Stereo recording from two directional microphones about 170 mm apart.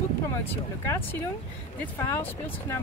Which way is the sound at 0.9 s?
10° left (ahead or behind).